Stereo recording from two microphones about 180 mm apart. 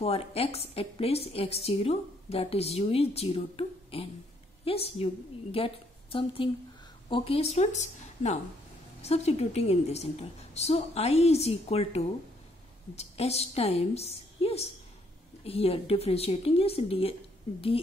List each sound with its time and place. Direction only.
0.0 s a woman's voice: 35° left (ahead or behind)